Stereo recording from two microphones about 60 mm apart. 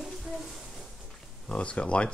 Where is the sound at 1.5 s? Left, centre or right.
Centre.